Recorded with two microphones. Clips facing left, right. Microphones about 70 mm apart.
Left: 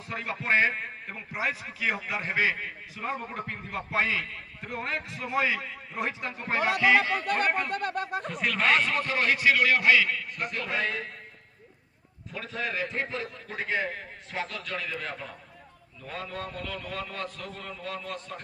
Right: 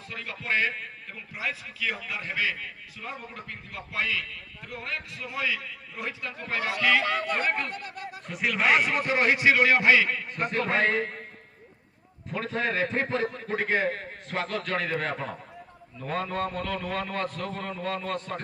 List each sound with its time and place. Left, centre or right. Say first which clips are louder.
0.1 s a man's voice: left 3 dB; left
7.4 s speech: left 1 dB; centre
7.7 s speech: left 8 dB; left
8.3 s a man's voice: right 2 dB; centre; by 11.2 s right
12.3 s a man's voice: right 5 dB; right